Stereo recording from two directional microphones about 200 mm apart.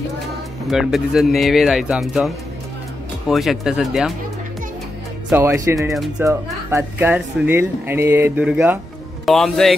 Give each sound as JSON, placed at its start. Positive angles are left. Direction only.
{"t": 0.7, "sound": "speech", "side_deg": 0}
{"t": 5.3, "sound": "speech", "side_deg": -15}